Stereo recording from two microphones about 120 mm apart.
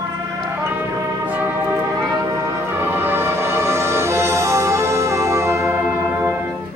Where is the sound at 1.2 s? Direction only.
15° right (ahead or behind).